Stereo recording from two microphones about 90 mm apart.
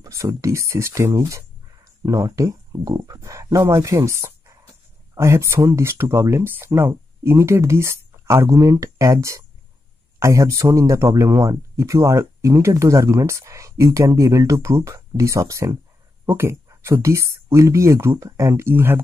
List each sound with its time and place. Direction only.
0.0 s speech: 35° right (ahead or behind)